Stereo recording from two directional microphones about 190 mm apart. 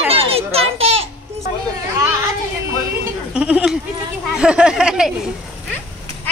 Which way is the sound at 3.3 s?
5° right (ahead or behind).